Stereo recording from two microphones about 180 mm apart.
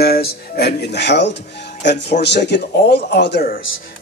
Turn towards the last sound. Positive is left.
turn(degrees=60)  # may be behind; listen again after turning